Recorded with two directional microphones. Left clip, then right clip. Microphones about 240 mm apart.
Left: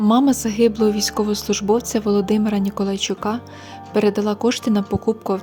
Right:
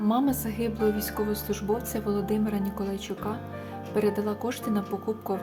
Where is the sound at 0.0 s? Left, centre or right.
Left.